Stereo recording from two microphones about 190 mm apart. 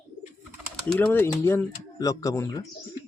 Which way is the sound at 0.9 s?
10° left (ahead or behind).